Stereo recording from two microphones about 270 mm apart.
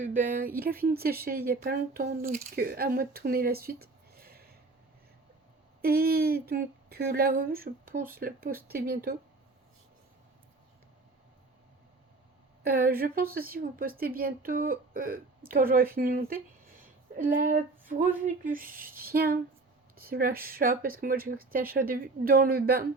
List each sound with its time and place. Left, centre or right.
0.0 s a woman's voice: right
5.8 s a woman's voice: right
12.6 s a woman's voice: right